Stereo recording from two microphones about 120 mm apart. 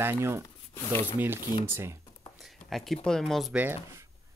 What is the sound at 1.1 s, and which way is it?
Speech, 20° right (ahead or behind).